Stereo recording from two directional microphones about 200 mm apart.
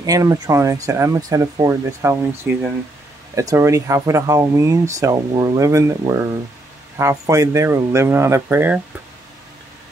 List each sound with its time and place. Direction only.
0.0 s speech: 15° right (ahead or behind)